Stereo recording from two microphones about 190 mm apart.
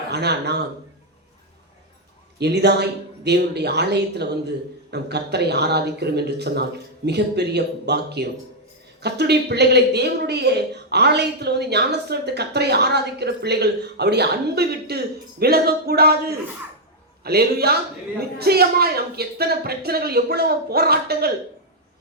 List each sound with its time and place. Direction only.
0.1 s a woman's voice: 60° right (ahead or behind)
2.4 s a woman's voice: 60° right (ahead or behind)